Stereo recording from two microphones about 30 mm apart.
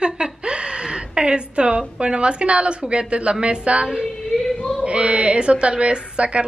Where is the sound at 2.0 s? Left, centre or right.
Right.